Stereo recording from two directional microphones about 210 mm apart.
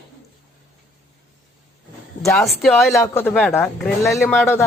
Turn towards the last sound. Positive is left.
turn(degrees=10)  # may be behind; listen again after turning